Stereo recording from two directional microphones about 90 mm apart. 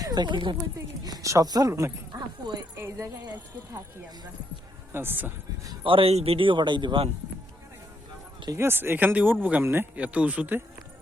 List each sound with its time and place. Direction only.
0.0 s speech: 50° right (ahead or behind)
1.0 s speech: 40° right (ahead or behind)
2.1 s dog: 45° right (ahead or behind)
3.0 s speech: 50° right (ahead or behind)
4.9 s speech: 25° right (ahead or behind)
5.8 s speech: 80° right
8.5 s speech: 25° right (ahead or behind)